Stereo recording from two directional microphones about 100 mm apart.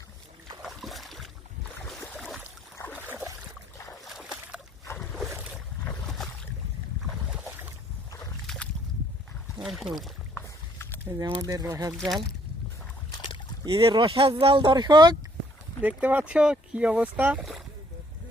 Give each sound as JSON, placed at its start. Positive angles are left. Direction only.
{"t": 0.6, "sound": "boat", "side_deg": 0}
{"t": 2.7, "sound": "boat", "side_deg": 20}
{"t": 4.0, "sound": "a sound", "side_deg": -5}
{"t": 7.1, "sound": "boat", "side_deg": -5}
{"t": 7.4, "sound": "boat", "side_deg": -20}
{"t": 8.4, "sound": "a sound", "side_deg": 10}
{"t": 9.6, "sound": "speech", "side_deg": 0}
{"t": 10.4, "sound": "a sound", "side_deg": 25}
{"t": 11.0, "sound": "speech", "side_deg": -35}
{"t": 11.9, "sound": "speech", "side_deg": 0}
{"t": 13.7, "sound": "speech", "side_deg": -55}
{"t": 15.8, "sound": "speech", "side_deg": -15}